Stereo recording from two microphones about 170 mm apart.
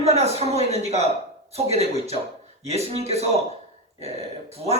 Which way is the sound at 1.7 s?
40° right (ahead or behind).